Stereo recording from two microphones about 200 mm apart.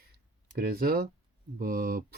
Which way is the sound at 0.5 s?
50° right (ahead or behind).